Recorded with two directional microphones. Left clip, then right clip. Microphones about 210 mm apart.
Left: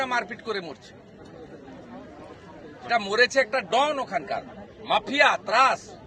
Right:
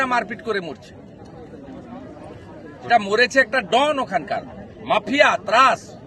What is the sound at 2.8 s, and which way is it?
A man's voice, 10° right (ahead or behind).